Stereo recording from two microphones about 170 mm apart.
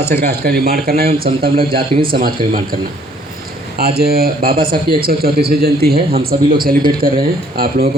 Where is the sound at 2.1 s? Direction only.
60° right (ahead or behind).